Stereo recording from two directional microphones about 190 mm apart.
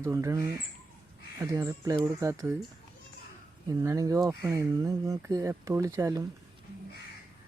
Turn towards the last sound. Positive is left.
turn(degrees=-15)  # may be behind; listen again after turning